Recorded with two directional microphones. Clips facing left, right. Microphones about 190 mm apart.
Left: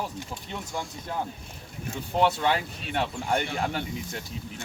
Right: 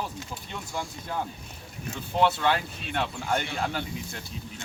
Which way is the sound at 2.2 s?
15° left (ahead or behind).